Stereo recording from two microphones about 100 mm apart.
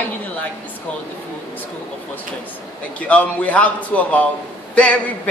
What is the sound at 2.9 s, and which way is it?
A woman's voice, 15° left (ahead or behind).